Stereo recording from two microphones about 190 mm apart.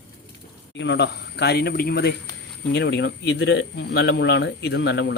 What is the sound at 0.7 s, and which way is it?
Speech, 70° left (ahead or behind).